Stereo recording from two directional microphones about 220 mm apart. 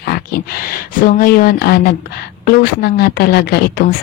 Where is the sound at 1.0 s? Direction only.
40° left (ahead or behind).